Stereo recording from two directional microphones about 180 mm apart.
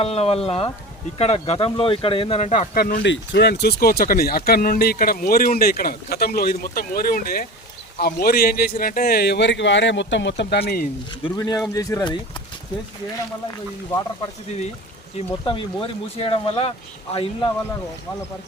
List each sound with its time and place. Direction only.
0.0 s speech: 35° left (ahead or behind)
2.7 s speech: 55° left (ahead or behind)
3.0 s speech: 75° left (ahead or behind)
11.2 s speech: 20° left (ahead or behind)
15.4 s speech: 30° left (ahead or behind)